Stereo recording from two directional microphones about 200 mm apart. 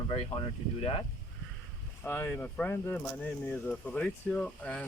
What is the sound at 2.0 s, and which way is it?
Speech, 10° left (ahead or behind).